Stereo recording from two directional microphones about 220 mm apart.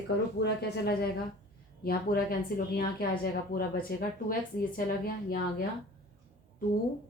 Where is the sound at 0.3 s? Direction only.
50° left (ahead or behind).